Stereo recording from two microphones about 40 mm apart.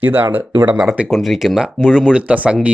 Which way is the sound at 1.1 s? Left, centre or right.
Centre.